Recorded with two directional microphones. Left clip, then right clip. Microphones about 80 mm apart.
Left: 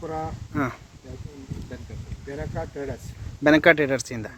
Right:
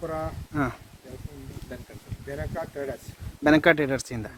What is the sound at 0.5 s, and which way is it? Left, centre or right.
Speech, right.